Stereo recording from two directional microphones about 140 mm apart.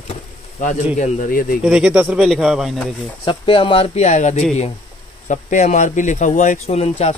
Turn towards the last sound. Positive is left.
turn(degrees=50)  # may be behind; listen again after turning